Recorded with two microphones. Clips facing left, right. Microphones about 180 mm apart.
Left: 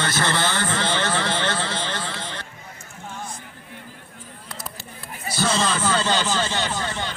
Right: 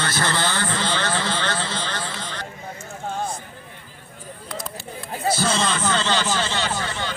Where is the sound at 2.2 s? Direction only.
20° left (ahead or behind).